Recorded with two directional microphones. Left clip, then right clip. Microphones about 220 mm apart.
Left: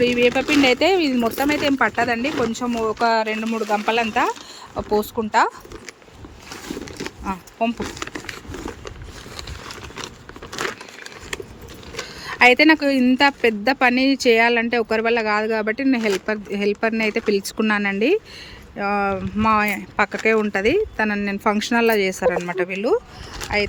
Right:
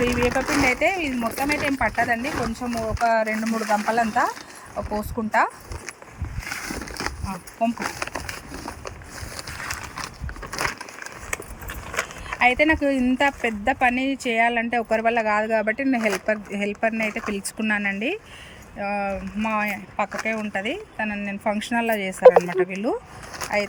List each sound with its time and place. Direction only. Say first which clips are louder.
0.0 s speech: left 4 dB; centre (ahead or behind)
0.6 s speech: left 6 dB; 15° left (ahead or behind)
3.5 s speech: left 2 dB; 5° left (ahead or behind)
7.3 s crumpling: left 4 dB; 15° left (ahead or behind)
12.2 s speech: left 6 dB; 10° left (ahead or behind)